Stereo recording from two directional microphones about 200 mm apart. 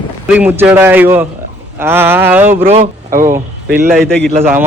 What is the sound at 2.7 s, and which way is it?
Speech, 30° right (ahead or behind).